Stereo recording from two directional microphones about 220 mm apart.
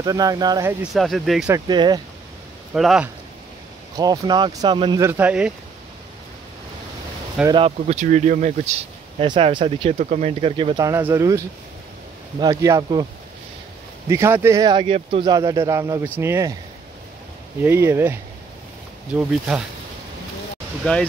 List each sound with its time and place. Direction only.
0.0 s speech: 15° right (ahead or behind)
0.9 s speech: centre (ahead or behind)
1.5 s speech: 20° right (ahead or behind)
2.7 s speech: centre (ahead or behind)
3.9 s speech: 15° right (ahead or behind)
7.4 s speech: 25° right (ahead or behind)
14.0 s speech: 10° right (ahead or behind)
17.6 s speech: 10° right (ahead or behind)
19.1 s speech: 5° right (ahead or behind)
20.8 s speech: 5° left (ahead or behind)